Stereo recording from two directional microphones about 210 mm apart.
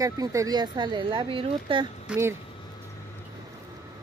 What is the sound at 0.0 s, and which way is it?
Speech, 15° right (ahead or behind).